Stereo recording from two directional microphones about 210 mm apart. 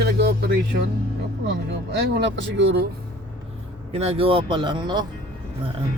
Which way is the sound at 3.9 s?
30° right (ahead or behind).